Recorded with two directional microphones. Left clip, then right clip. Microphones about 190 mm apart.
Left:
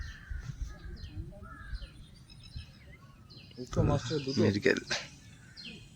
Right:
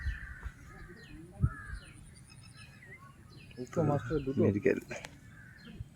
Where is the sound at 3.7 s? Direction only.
15° left (ahead or behind).